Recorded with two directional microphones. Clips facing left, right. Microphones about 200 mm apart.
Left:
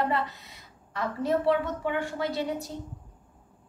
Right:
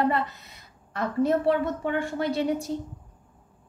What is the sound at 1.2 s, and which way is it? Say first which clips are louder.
A woman's voice: right 1 dB; 50° right (ahead or behind).